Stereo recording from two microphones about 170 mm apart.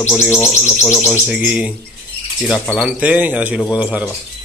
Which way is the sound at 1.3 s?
5° right (ahead or behind).